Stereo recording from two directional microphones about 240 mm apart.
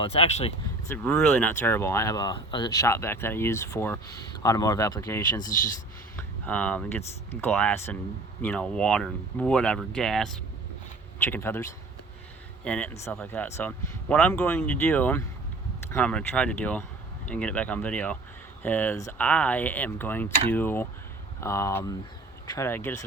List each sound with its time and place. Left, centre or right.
0.0 s speech: left
0.9 s speech: centre